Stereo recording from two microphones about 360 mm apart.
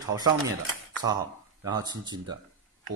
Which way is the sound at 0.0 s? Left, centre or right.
Centre.